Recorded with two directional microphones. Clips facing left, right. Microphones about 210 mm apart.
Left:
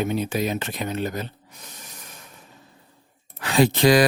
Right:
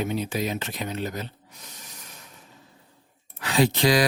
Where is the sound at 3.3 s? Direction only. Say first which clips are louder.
Left 3 dB; 50° left (ahead or behind).